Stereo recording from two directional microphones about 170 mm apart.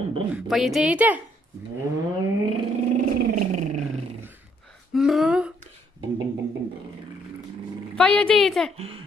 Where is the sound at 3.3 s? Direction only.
45° right (ahead or behind).